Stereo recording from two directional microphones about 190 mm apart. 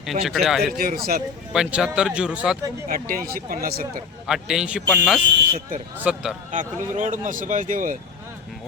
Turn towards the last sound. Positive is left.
turn(degrees=-45)  # may be behind; listen again after turning